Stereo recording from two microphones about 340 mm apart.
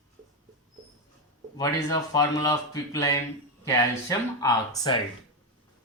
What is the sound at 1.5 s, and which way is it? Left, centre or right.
Speech, centre.